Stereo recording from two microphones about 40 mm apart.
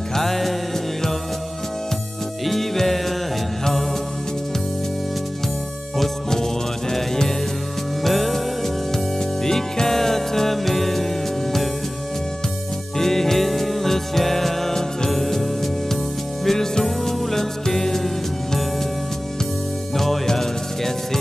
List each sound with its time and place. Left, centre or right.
0.1 s music: centre
2.4 s music: centre
5.9 s music: centre
12.9 s music: centre
20.0 s music: centre